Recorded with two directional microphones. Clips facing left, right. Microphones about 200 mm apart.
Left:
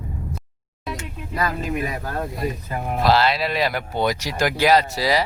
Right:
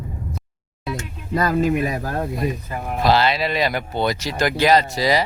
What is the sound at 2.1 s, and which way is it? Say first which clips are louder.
Speech: right 3 dB; 20° right (ahead or behind).